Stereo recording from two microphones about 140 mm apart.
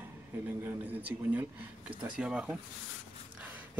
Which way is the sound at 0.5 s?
10° right (ahead or behind).